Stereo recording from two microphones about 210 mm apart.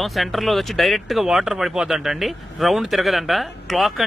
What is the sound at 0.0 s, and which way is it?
Speech, centre (ahead or behind).